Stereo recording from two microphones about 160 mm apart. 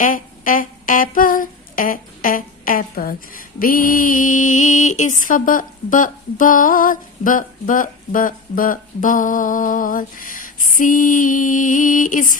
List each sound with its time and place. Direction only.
0.0 s humming: 60° left (ahead or behind)
5.2 s a woman's voice: 55° left (ahead or behind)